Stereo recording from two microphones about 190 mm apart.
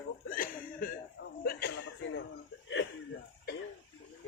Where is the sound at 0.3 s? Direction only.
45° left (ahead or behind).